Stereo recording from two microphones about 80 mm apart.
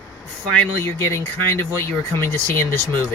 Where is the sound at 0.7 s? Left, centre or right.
Left.